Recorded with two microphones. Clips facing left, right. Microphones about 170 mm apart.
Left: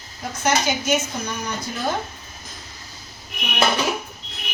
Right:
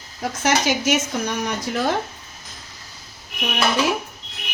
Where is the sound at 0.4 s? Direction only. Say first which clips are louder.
Right 1 dB; 90° right.